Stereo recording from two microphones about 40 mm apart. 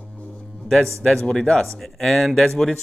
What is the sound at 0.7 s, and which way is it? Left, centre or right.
Speech, centre.